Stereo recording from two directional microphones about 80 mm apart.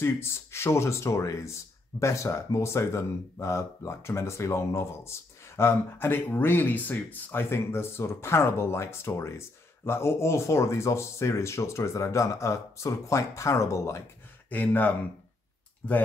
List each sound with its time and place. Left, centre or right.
0.0 s speech: left
14.5 s speech: left